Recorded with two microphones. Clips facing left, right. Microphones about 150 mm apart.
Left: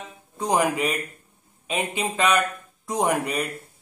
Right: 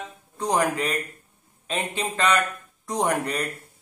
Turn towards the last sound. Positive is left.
turn(degrees=5)  # may be behind; listen again after turning